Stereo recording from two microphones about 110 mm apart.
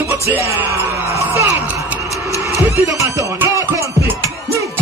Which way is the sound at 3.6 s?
25° right (ahead or behind).